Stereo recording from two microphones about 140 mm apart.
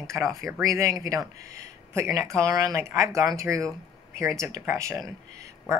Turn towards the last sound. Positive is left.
turn(degrees=-25)  # may be behind; listen again after turning